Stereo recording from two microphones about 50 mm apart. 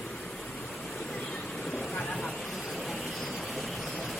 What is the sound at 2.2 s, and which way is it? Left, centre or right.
Vehicle, centre.